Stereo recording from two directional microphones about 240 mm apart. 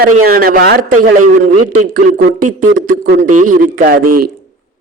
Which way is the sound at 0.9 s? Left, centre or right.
Right.